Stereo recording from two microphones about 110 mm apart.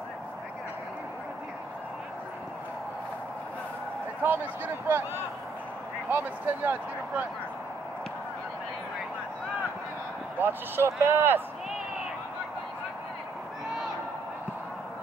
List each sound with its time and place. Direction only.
4.2 s speech: 20° right (ahead or behind)
6.0 s speech: 20° right (ahead or behind)
10.4 s speech: 20° right (ahead or behind)